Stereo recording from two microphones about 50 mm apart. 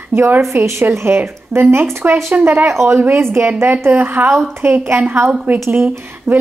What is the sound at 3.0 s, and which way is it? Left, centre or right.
Speech, right.